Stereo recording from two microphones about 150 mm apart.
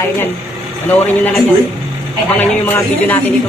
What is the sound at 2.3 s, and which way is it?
Speech, 10° left (ahead or behind).